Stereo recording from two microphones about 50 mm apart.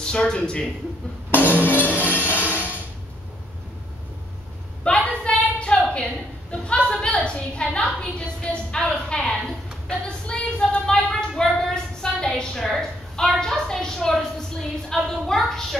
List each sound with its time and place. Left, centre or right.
0.0 s speech: centre
1.3 s music: left
2.3 s music: right
4.8 s a sound: left
14.9 s a woman's voice: centre